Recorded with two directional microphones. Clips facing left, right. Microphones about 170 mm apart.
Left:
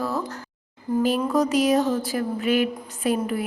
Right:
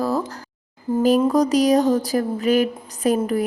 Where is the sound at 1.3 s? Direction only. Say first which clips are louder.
Right 3 dB; 35° right (ahead or behind).